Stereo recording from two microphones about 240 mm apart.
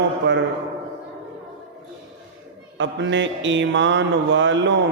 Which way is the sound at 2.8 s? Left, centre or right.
Right.